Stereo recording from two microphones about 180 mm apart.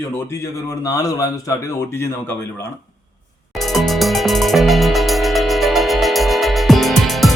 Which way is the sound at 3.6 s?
Centre (ahead or behind).